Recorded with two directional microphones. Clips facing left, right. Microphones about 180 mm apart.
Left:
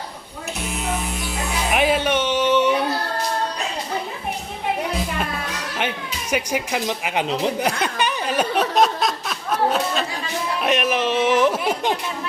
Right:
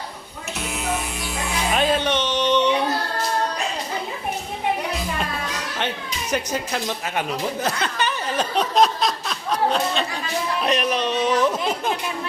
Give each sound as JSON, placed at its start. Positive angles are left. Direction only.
{"t": 1.7, "sound": "music", "side_deg": 10}
{"t": 6.3, "sound": "speech", "side_deg": 10}
{"t": 8.7, "sound": "a sound", "side_deg": 0}
{"t": 10.6, "sound": "speech", "side_deg": 5}